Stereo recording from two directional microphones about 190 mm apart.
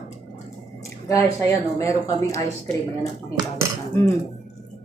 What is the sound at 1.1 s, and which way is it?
Speech, 15° left (ahead or behind).